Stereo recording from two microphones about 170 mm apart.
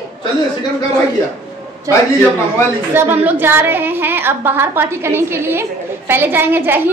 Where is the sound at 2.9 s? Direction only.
10° right (ahead or behind).